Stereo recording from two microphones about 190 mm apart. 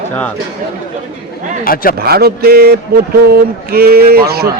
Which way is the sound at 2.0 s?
55° right (ahead or behind).